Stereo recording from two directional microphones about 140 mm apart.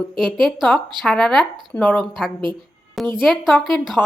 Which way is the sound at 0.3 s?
Centre (ahead or behind).